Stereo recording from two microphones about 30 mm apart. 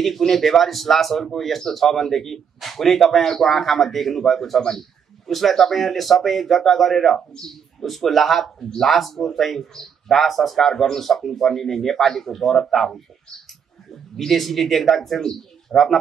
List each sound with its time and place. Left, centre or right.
0.2 s speech: centre
4.6 s a sound: centre
5.3 s speech: centre
8.6 s speech: centre
8.9 s speech: centre
14.1 s speech: centre